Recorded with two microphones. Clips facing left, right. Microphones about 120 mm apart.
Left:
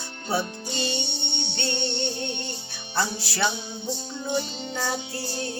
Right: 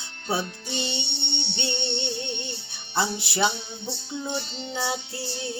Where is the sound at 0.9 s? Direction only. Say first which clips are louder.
Left 2 dB; 45° left (ahead or behind).